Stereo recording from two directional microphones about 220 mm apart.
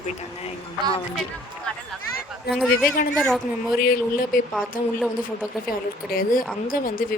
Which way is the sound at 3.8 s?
40° left (ahead or behind).